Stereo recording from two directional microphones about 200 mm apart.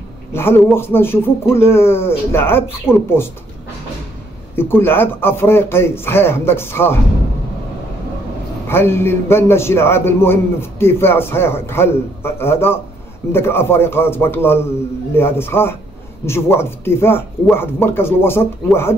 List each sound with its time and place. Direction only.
0.3 s a man's voice: 10° left (ahead or behind)
4.6 s a man's voice: 10° left (ahead or behind)
8.6 s a man's voice: 10° left (ahead or behind)